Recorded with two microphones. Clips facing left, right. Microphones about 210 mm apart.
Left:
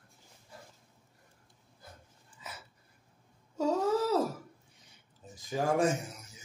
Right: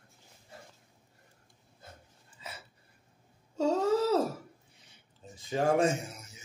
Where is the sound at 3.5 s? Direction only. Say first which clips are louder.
Right 1 dB; 70° right (ahead or behind).